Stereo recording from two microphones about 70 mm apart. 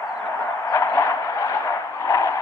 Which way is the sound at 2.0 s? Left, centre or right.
Left.